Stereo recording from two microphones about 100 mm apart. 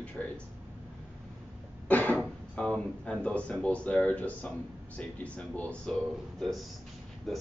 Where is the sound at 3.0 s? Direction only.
10° left (ahead or behind).